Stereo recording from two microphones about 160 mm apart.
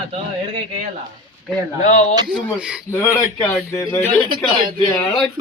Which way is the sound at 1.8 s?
55° left (ahead or behind).